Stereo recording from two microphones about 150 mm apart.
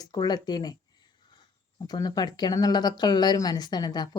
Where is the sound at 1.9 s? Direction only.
25° left (ahead or behind).